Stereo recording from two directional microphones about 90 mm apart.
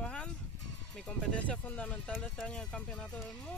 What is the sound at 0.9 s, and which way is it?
Speech, 10° left (ahead or behind).